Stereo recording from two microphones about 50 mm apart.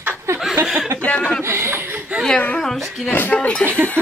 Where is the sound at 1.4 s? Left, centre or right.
Right.